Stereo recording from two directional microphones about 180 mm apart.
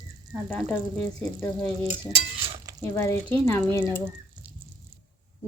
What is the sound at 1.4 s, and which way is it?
A woman's voice, 10° left (ahead or behind).